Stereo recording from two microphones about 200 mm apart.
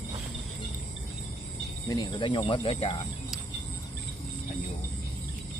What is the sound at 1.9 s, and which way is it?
Speech, 20° left (ahead or behind).